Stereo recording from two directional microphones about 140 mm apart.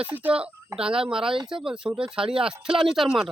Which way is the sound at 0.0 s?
10° right (ahead or behind).